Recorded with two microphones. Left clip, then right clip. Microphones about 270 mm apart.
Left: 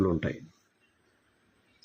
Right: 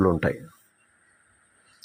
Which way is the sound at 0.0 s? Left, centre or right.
Centre.